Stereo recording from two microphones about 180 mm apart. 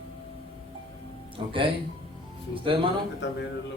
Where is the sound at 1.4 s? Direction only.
30° right (ahead or behind).